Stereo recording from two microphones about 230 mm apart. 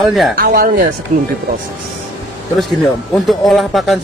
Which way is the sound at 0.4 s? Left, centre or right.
Right.